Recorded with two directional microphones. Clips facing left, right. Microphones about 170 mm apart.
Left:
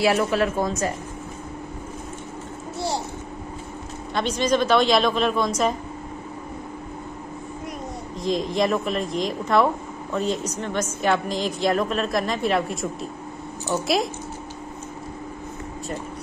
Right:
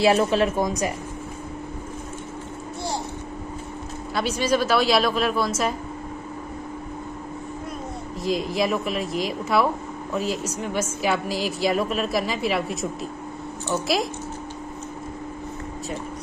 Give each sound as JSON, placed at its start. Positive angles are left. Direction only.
{"t": 0.0, "sound": "a woman's voice", "side_deg": -25}
{"t": 4.1, "sound": "a woman's voice", "side_deg": -5}
{"t": 8.2, "sound": "a woman's voice", "side_deg": -5}